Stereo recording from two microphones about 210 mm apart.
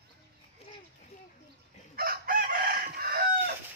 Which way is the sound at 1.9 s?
45° right (ahead or behind).